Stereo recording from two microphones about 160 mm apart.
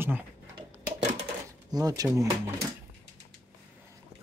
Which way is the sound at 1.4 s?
25° right (ahead or behind).